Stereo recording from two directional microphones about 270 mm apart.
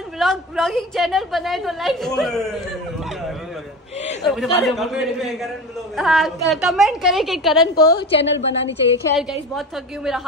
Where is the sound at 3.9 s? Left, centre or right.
Left.